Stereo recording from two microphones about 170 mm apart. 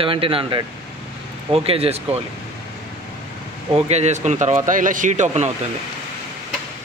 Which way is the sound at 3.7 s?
40° right (ahead or behind).